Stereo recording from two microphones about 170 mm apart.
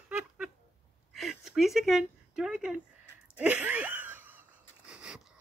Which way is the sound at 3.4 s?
10° right (ahead or behind).